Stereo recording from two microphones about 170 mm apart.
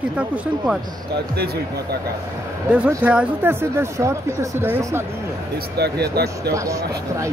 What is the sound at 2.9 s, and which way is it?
Speech, 10° right (ahead or behind).